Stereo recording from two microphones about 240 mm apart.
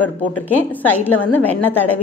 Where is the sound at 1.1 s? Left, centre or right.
Left.